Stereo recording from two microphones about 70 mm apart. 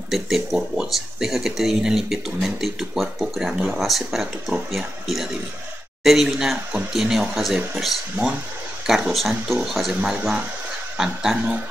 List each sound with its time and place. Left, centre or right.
0.1 s speech: centre
8.2 s speech: centre
8.8 s speech: centre